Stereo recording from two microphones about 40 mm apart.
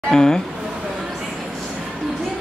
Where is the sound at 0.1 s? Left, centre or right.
Centre.